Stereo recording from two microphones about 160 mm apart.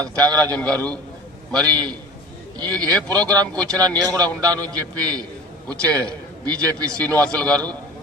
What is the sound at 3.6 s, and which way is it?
A man's voice, 25° right (ahead or behind).